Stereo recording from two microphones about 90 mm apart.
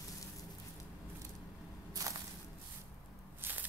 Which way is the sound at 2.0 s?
40° right (ahead or behind).